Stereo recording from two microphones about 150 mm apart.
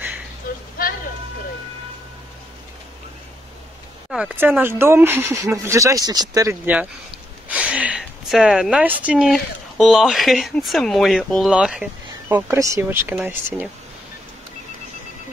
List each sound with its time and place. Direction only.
0.5 s a sound: 75° left (ahead or behind)
4.1 s speech: 5° right (ahead or behind); by 6.5 s 25° right (ahead or behind)
6.6 s a woman's voice: 10° right (ahead or behind)